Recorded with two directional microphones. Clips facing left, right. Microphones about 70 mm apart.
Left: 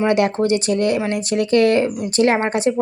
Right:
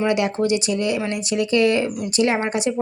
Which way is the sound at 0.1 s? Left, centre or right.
Left.